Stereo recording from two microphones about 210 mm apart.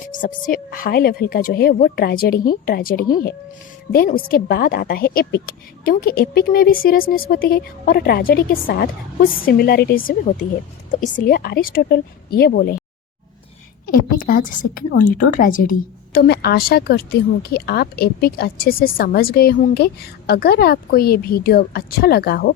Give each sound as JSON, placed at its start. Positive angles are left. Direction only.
{"t": 0.1, "sound": "a woman's voice", "side_deg": 40}
{"t": 13.8, "sound": "a woman's voice", "side_deg": 40}
{"t": 16.1, "sound": "a woman's voice", "side_deg": 50}